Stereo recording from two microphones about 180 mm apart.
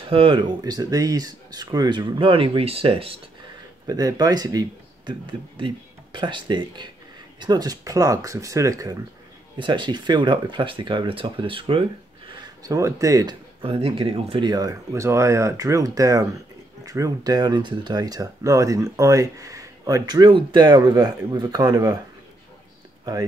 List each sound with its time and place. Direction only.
0.1 s speech: 30° right (ahead or behind)
3.8 s speech: 20° right (ahead or behind)
12.4 s speech: 20° right (ahead or behind)